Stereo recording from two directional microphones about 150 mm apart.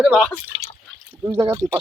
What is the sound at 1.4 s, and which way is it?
Speech, 30° right (ahead or behind).